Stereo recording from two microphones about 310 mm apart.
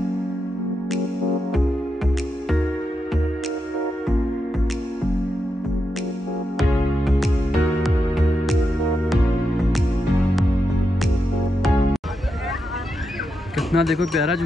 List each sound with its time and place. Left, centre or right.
7.8 s music: centre
13.6 s speech: centre